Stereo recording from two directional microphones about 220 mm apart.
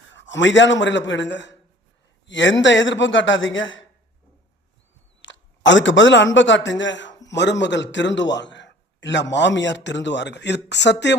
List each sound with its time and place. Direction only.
0.1 s a man's voice: 55° left (ahead or behind)
5.2 s a man's voice: 55° left (ahead or behind)